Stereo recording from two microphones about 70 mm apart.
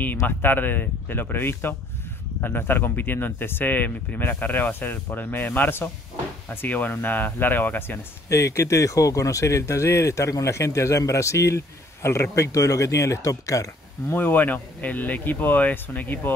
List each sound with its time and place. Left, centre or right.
0.2 s speech: left
8.3 s speech: left
14.1 s speech: left